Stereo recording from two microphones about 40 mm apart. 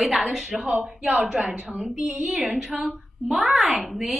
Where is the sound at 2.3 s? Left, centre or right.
Centre.